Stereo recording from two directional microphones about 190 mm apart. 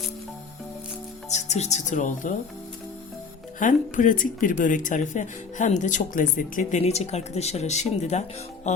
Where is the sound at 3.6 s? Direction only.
45° left (ahead or behind).